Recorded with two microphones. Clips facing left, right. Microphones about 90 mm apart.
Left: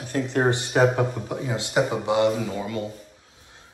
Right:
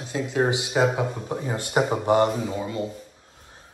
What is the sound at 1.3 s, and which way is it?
Speech, 30° right (ahead or behind).